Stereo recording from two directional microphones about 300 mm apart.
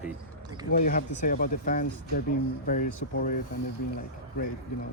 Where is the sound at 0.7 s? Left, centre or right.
Left.